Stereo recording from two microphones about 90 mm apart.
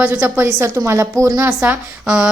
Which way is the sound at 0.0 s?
20° right (ahead or behind).